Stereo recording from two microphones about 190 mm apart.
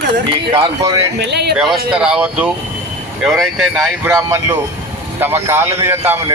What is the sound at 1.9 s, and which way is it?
Speech, 5° right (ahead or behind).